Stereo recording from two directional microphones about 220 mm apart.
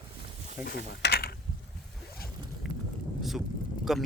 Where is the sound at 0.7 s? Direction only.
50° left (ahead or behind).